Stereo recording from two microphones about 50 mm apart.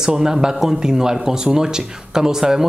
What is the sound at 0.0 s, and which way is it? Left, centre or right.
A man's voice, centre.